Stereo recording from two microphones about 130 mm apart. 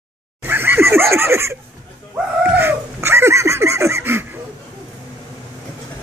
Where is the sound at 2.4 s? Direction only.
15° right (ahead or behind).